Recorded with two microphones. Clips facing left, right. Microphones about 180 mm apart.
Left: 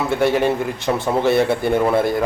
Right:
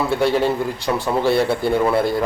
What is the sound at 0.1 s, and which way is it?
A man's voice, 20° left (ahead or behind).